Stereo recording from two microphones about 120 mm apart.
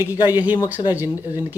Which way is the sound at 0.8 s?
45° left (ahead or behind).